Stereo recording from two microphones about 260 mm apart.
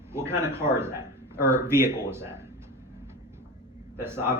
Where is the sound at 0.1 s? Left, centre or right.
Centre.